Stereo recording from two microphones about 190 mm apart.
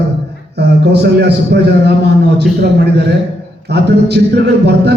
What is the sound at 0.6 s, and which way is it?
A man's voice, 60° right (ahead or behind).